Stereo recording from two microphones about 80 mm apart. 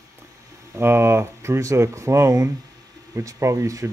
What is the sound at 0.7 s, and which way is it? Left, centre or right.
Speech, right.